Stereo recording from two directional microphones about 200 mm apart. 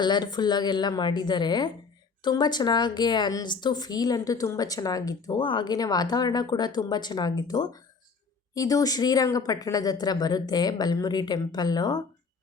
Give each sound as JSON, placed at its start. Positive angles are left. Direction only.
{"t": 0.0, "sound": "a woman's voice", "side_deg": 20}